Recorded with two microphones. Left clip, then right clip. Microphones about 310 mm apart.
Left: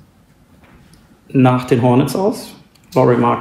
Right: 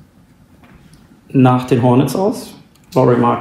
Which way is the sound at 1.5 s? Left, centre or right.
Centre.